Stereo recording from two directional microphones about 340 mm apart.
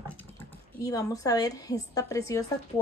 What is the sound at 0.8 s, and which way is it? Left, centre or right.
A woman's voice, centre.